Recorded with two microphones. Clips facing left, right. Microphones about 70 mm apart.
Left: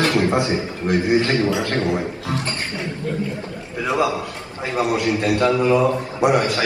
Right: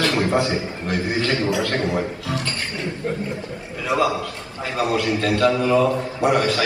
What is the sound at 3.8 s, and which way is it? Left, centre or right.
A man's voice, left.